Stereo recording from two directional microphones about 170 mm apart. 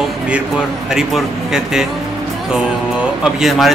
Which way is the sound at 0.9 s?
5° right (ahead or behind).